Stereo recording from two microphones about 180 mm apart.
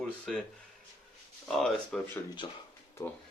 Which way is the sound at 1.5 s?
Centre (ahead or behind).